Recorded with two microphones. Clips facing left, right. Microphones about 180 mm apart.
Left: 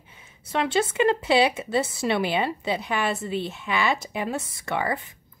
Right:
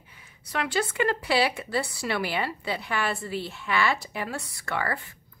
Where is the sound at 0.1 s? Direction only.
25° left (ahead or behind).